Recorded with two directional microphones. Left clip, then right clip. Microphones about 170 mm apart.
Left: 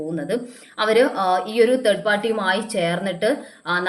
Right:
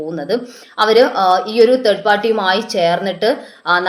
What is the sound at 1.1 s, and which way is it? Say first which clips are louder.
A woman's voice: right 6 dB; 15° left (ahead or behind).